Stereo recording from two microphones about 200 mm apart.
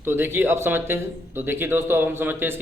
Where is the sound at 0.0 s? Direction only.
10° right (ahead or behind).